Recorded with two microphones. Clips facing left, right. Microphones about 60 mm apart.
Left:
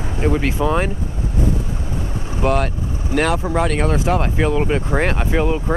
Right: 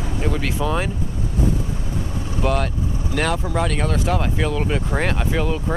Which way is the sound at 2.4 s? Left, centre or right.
Centre.